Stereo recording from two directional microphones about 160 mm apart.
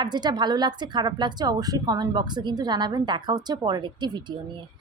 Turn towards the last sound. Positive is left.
turn(degrees=-30)  # may be behind; listen again after turning